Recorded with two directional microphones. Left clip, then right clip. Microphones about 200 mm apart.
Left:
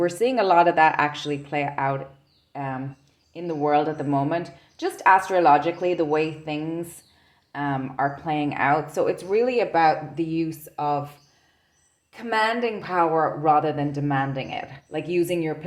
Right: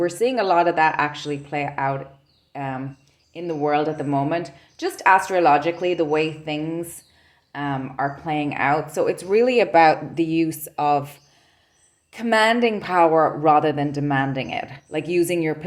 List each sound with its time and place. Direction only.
0.0 s a woman's voice: centre (ahead or behind); by 15.5 s 30° right (ahead or behind)